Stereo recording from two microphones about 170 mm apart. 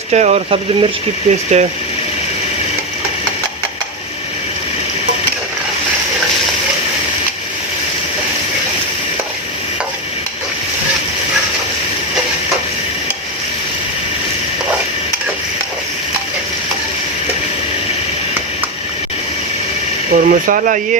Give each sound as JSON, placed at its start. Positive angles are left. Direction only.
{"t": 0.1, "sound": "speech", "side_deg": -40}
{"t": 20.1, "sound": "speech", "side_deg": -55}